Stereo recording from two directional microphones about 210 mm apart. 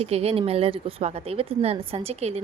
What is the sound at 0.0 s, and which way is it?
A woman's voice, 30° right (ahead or behind).